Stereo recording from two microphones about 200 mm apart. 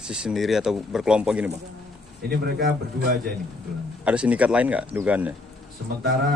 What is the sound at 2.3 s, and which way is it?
Speech, 50° right (ahead or behind).